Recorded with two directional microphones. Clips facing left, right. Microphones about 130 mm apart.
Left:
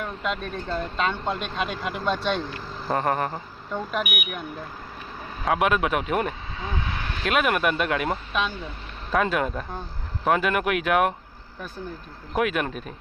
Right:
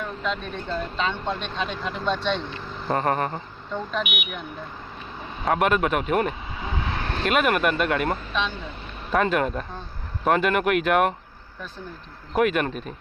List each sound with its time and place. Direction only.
0.2 s speech: 5° left (ahead or behind)
6.7 s vehicle: 30° right (ahead or behind)
7.3 s speech: centre (ahead or behind)
12.3 s speech: centre (ahead or behind)